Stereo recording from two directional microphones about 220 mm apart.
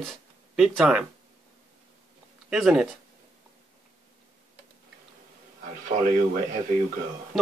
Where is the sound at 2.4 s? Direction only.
Centre (ahead or behind).